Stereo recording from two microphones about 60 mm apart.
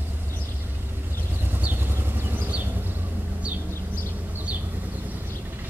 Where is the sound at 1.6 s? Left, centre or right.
Right.